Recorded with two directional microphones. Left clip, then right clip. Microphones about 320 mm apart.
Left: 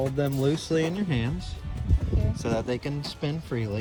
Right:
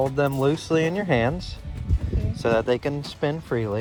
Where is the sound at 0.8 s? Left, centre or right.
Left.